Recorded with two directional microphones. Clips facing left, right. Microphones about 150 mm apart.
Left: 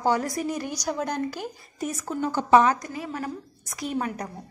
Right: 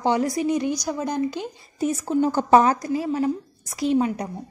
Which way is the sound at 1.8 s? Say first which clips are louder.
Right 7 dB; 30° right (ahead or behind).